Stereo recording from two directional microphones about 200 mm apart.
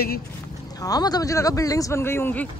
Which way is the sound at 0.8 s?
20° left (ahead or behind).